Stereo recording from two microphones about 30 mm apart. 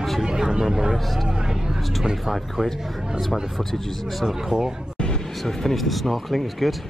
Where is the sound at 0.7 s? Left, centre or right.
Centre.